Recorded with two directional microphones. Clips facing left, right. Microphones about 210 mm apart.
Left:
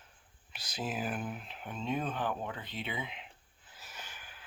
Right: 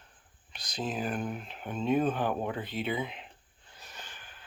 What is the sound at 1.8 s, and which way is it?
Speech, 50° right (ahead or behind).